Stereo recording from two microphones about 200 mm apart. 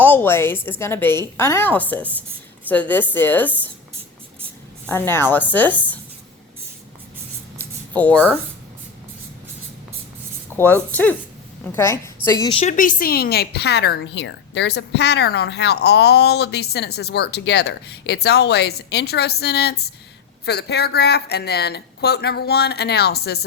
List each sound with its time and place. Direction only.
0.0 s a woman's voice: 10° left (ahead or behind)
4.9 s a woman's voice: 10° left (ahead or behind)
7.6 s a sound: 10° left (ahead or behind)
10.5 s a woman's voice: 10° left (ahead or behind)
12.4 s a woman's voice: 25° left (ahead or behind)
12.7 s a woman's voice: 45° left (ahead or behind)